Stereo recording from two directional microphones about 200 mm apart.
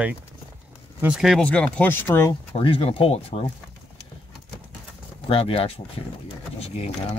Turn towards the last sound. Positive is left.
turn(degrees=30)  # may be behind; listen again after turning